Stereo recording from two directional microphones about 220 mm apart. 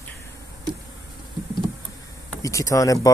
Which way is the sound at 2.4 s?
15° left (ahead or behind).